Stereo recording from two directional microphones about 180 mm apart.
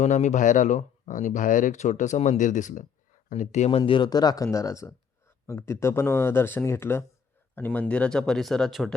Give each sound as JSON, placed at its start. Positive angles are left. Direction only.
{"t": 0.0, "sound": "speech", "side_deg": 40}